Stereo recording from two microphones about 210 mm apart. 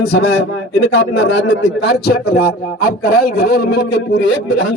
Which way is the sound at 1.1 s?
65° left (ahead or behind).